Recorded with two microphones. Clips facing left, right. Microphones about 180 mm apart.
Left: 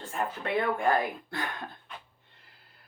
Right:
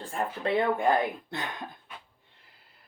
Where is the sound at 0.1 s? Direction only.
25° right (ahead or behind).